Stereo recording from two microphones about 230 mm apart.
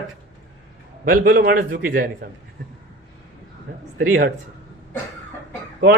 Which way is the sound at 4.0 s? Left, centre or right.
Right.